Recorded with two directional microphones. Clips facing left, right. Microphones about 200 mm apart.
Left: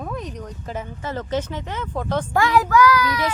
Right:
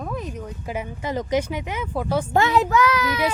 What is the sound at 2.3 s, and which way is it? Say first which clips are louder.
Speech: left 2 dB; 25° right (ahead or behind).